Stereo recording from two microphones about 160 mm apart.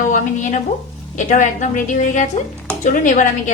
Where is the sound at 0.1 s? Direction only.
50° left (ahead or behind).